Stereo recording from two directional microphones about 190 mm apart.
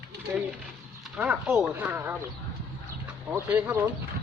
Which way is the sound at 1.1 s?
5° right (ahead or behind).